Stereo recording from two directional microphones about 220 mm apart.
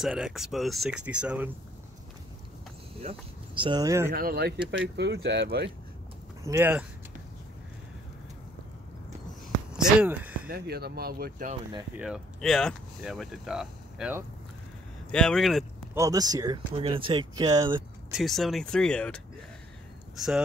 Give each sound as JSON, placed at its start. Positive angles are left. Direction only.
{"t": 0.0, "sound": "speech", "side_deg": 0}
{"t": 3.0, "sound": "speech", "side_deg": -25}
{"t": 4.1, "sound": "speech", "side_deg": -45}
{"t": 6.5, "sound": "speech", "side_deg": -5}
{"t": 9.8, "sound": "speech", "side_deg": -5}
{"t": 10.5, "sound": "speech", "side_deg": -45}
{"t": 12.0, "sound": "speech", "side_deg": 0}
{"t": 15.9, "sound": "speech", "side_deg": -15}
{"t": 18.1, "sound": "speech", "side_deg": 0}